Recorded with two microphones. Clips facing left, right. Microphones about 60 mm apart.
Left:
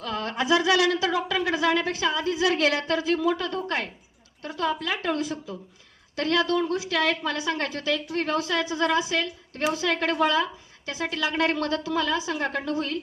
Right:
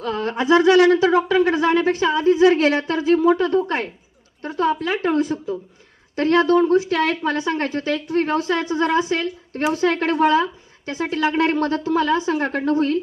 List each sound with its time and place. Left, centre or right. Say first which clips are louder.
0.0 s speech: right 6 dB; right